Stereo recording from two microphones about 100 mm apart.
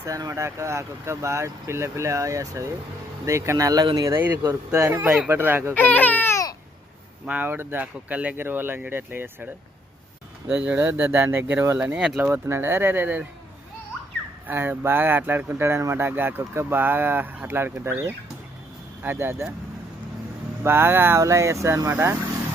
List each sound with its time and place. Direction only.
0.0 s speech: 35° right (ahead or behind)
4.1 s speech: 20° right (ahead or behind)
4.4 s speech: 30° right (ahead or behind)
5.0 s speech: 5° right (ahead or behind)
5.3 s speech: 20° right (ahead or behind)
5.7 s speech: 15° left (ahead or behind)
6.3 s babbling: 35° left (ahead or behind)
7.3 s speech: 20° right (ahead or behind)
10.5 s speech: 15° right (ahead or behind)
11.9 s speech: 10° right (ahead or behind)
12.3 s speech: 25° right (ahead or behind)
14.4 s speech: 20° right (ahead or behind)
20.7 s speech: 20° right (ahead or behind)